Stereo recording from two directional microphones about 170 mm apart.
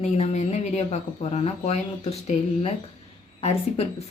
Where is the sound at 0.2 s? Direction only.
45° left (ahead or behind).